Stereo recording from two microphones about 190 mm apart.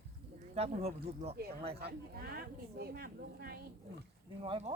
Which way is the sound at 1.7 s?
55° right (ahead or behind).